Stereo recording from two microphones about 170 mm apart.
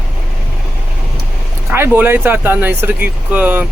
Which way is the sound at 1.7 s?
10° right (ahead or behind).